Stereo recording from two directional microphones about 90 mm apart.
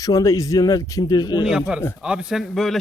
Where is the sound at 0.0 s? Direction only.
40° left (ahead or behind).